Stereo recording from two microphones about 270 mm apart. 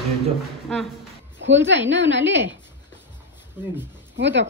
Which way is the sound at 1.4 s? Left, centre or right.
Right.